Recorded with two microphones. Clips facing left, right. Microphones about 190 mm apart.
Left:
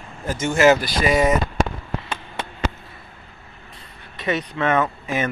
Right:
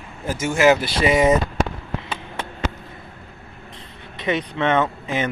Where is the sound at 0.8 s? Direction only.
20° right (ahead or behind).